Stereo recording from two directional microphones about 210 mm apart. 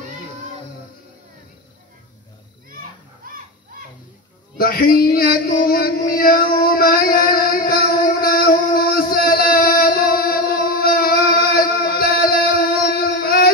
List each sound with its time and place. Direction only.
3.2 s children playing: 40° right (ahead or behind)
4.6 s a sound: 45° left (ahead or behind)
12.0 s music: 45° left (ahead or behind)